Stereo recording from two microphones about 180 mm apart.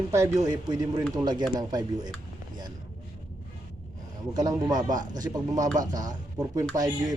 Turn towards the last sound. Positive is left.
turn(degrees=-20)  # may be behind; listen again after turning